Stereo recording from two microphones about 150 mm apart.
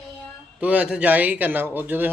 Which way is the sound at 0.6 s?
10° right (ahead or behind).